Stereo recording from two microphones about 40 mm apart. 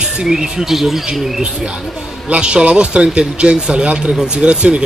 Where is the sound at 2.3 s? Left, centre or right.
Right.